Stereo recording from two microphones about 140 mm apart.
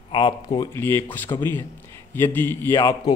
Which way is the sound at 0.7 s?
15° left (ahead or behind).